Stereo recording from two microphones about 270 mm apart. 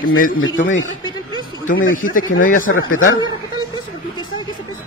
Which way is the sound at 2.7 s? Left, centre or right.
Left.